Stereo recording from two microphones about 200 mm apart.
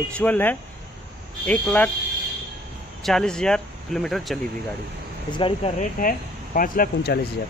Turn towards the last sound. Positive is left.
turn(degrees=50)  # may be behind; listen again after turning